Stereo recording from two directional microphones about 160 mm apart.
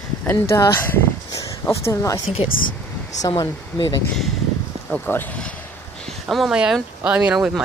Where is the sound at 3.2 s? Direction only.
25° left (ahead or behind).